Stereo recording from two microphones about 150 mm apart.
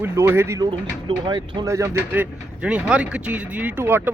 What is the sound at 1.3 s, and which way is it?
Speech, 35° right (ahead or behind).